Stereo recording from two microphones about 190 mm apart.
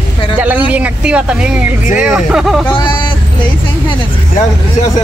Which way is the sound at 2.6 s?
25° left (ahead or behind).